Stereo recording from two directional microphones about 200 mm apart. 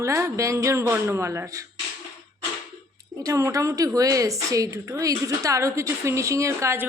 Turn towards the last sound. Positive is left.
turn(degrees=-15)  # may be behind; listen again after turning